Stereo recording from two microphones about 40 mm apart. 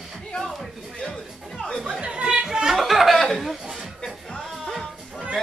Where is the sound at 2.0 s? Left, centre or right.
Right.